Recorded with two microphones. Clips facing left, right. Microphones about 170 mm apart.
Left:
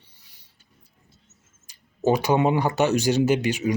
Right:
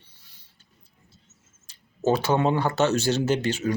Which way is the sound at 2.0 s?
15° left (ahead or behind).